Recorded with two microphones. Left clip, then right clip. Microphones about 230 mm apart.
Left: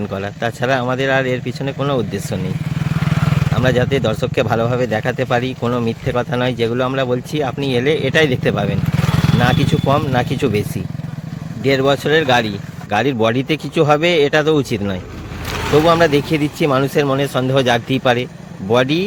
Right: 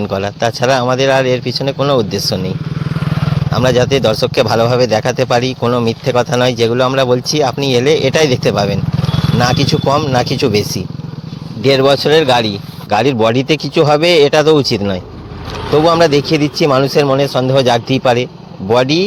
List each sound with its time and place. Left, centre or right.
0.0 s speech: centre
3.5 s speech: centre